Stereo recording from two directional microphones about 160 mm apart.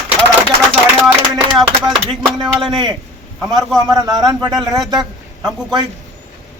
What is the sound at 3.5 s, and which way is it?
A man's voice, 25° right (ahead or behind).